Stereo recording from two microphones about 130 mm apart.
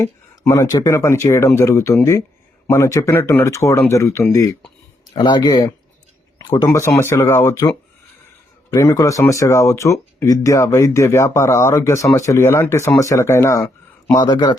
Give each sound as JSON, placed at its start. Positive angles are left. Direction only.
{"t": 0.0, "sound": "speech", "side_deg": 20}
{"t": 5.1, "sound": "speech", "side_deg": 35}
{"t": 6.7, "sound": "speech", "side_deg": 20}
{"t": 8.7, "sound": "speech", "side_deg": 25}
{"t": 14.1, "sound": "speech", "side_deg": 35}